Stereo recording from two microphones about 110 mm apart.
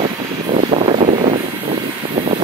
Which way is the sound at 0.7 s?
80° right.